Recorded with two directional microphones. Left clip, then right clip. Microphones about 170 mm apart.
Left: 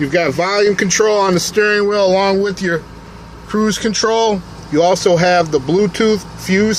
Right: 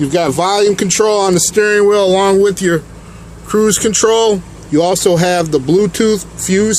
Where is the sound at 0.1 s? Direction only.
40° right (ahead or behind).